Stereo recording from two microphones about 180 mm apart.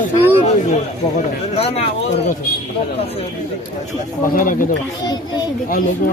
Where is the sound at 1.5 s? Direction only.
35° left (ahead or behind).